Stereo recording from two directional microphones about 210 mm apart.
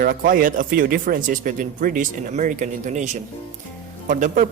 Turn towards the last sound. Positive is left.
turn(degrees=-40)  # may be behind; listen again after turning